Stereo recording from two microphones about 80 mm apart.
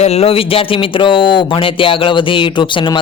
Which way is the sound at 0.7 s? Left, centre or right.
Left.